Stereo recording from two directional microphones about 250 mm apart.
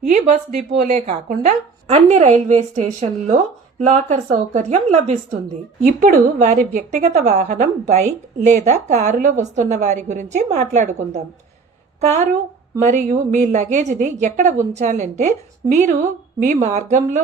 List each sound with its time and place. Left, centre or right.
0.1 s a woman's voice: right